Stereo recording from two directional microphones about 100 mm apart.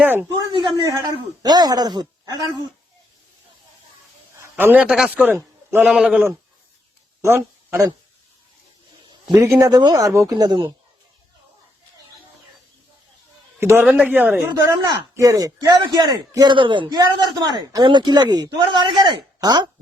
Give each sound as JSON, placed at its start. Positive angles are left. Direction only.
{"t": 0.0, "sound": "speech", "side_deg": -20}
{"t": 0.3, "sound": "a man's voice", "side_deg": -35}
{"t": 4.5, "sound": "a man's voice", "side_deg": -15}
{"t": 5.8, "sound": "speech", "side_deg": -5}
{"t": 7.2, "sound": "a sound", "side_deg": -25}
{"t": 9.3, "sound": "a man's voice", "side_deg": -35}
{"t": 13.6, "sound": "a man's voice", "side_deg": -30}
{"t": 13.8, "sound": "speech", "side_deg": -15}
{"t": 14.6, "sound": "a man's voice", "side_deg": -30}
{"t": 16.3, "sound": "speech", "side_deg": -45}
{"t": 17.0, "sound": "a man's voice", "side_deg": -40}